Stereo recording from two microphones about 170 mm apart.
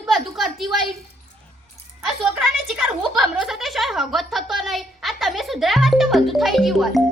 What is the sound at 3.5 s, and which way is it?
A woman's voice, centre (ahead or behind).